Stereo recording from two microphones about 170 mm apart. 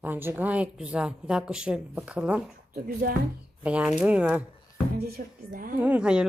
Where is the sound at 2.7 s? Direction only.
60° right (ahead or behind).